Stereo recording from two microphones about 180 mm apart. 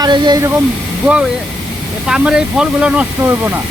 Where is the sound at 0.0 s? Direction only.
20° right (ahead or behind).